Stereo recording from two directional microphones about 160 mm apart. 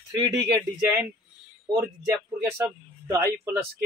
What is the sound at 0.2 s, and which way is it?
A man's voice, 20° right (ahead or behind).